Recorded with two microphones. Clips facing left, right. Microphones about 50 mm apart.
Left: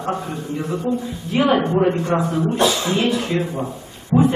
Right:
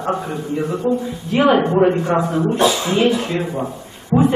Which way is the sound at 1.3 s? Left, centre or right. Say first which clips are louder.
Right 3 dB; centre.